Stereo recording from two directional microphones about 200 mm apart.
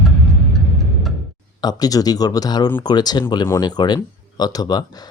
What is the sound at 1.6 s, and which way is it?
Speech, 20° left (ahead or behind).